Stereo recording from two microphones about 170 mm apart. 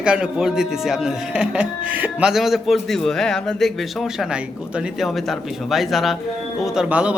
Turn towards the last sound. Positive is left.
turn(degrees=-5)  # may be behind; listen again after turning